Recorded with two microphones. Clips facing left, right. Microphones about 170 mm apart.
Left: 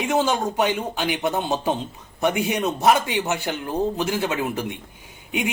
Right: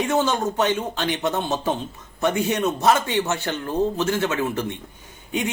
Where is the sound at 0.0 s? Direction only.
10° left (ahead or behind).